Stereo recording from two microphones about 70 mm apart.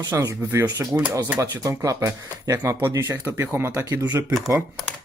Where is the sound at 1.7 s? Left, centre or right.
Right.